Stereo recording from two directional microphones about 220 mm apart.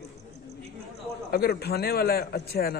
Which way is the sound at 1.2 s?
45° left (ahead or behind).